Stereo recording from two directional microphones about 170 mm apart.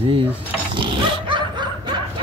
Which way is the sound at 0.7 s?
30° right (ahead or behind).